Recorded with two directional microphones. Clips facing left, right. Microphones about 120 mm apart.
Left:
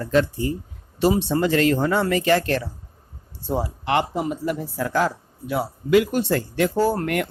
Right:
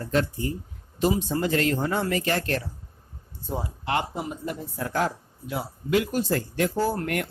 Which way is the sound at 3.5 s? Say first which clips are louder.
Left 5 dB; 75° left (ahead or behind).